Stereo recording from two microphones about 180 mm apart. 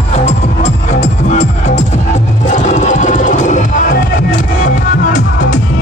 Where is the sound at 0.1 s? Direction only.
35° left (ahead or behind).